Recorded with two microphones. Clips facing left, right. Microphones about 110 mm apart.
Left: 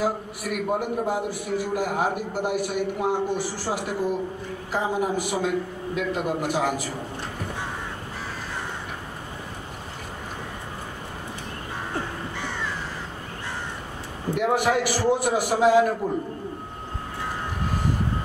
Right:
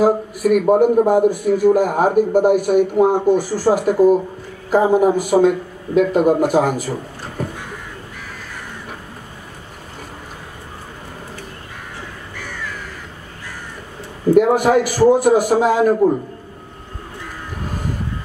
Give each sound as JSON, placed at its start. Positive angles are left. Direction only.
{"t": 0.0, "sound": "a man's voice", "side_deg": -45}
{"t": 12.4, "sound": "crow", "side_deg": 25}
{"t": 14.3, "sound": "a man's voice", "side_deg": -45}